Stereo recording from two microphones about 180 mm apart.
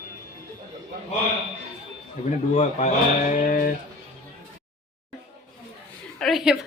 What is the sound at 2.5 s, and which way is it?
Speech, 40° left (ahead or behind).